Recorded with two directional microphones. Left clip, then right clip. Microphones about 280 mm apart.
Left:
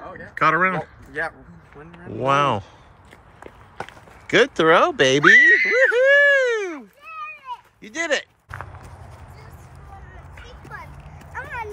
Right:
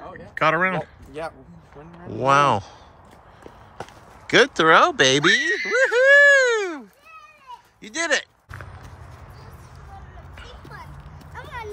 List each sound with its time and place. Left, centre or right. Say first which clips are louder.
0.0 s speech: left 2 dB; centre
4.3 s speech: even; centre
5.8 s a sound: right 1 dB; centre
7.8 s speech: right 1 dB; centre
11.3 s clip-clop: left 4 dB; centre